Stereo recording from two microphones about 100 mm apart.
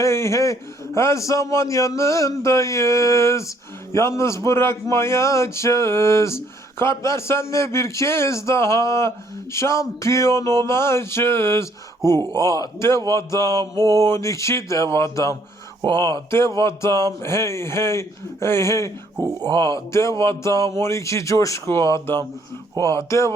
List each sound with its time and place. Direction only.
0.0 s a man's voice: 30° left (ahead or behind)
13.7 s speech: 40° right (ahead or behind)
14.0 s a man's voice: 30° left (ahead or behind)
19.2 s speech: 40° right (ahead or behind)
19.5 s a man's voice: 30° left (ahead or behind)